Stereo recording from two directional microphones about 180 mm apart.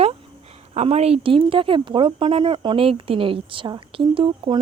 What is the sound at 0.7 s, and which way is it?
Speech, 35° right (ahead or behind).